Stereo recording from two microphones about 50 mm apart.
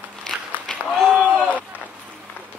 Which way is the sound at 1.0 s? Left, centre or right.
Centre.